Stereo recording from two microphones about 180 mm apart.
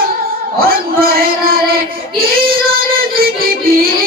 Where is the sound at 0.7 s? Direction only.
55° right (ahead or behind).